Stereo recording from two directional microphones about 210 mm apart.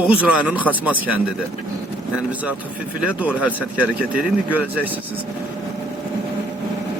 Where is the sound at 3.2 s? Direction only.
5° right (ahead or behind).